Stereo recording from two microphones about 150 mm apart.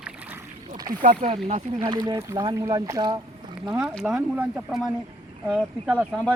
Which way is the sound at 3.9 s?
Centre (ahead or behind).